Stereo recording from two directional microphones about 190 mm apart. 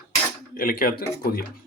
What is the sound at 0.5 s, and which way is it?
Speech, 50° left (ahead or behind).